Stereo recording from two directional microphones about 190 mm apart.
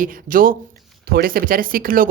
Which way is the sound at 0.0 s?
45° right (ahead or behind).